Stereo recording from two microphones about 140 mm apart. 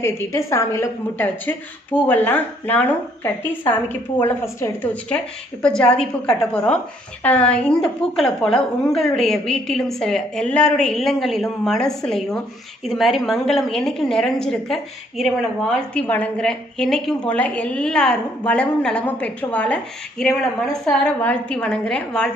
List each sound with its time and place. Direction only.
0.0 s a woman's voice: 20° left (ahead or behind)